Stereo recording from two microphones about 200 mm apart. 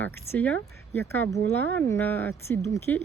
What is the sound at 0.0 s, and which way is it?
Speech, 10° left (ahead or behind).